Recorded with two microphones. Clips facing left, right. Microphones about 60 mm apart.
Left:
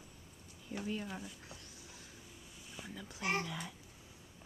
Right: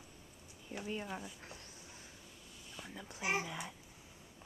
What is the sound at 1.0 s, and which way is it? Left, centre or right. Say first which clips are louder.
Speech: right 1 dB; centre.